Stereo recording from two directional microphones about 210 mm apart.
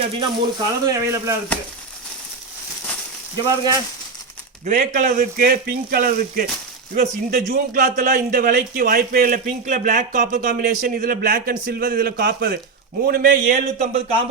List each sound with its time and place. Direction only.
0.2 s speech: 15° right (ahead or behind)
3.4 s speech: 15° right (ahead or behind)
4.6 s a man's voice: 35° right (ahead or behind)